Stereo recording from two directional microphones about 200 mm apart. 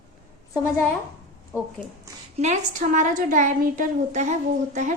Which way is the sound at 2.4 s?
40° right (ahead or behind).